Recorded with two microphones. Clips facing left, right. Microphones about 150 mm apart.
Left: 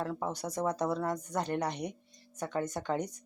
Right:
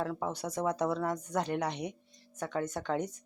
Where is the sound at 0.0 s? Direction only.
Centre (ahead or behind).